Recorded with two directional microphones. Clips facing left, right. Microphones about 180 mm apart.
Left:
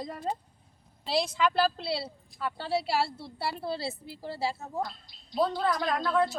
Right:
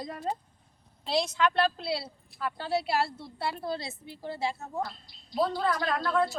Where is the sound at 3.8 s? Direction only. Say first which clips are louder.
Left 5 dB; 35° left (ahead or behind).